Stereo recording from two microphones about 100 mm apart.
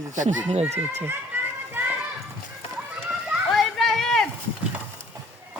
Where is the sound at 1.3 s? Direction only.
25° right (ahead or behind).